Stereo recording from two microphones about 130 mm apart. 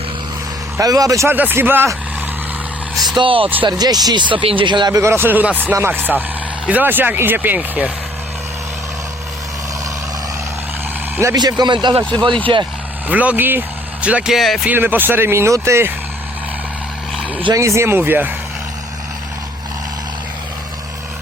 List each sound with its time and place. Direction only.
0.8 s speech: 25° right (ahead or behind)
3.2 s speech: 45° right (ahead or behind)
4.9 s speech: 20° right (ahead or behind)
11.3 s speech: 35° right (ahead or behind)
13.1 s speech: 10° right (ahead or behind)
14.7 s speech: 15° right (ahead or behind)
17.5 s speech: 20° right (ahead or behind)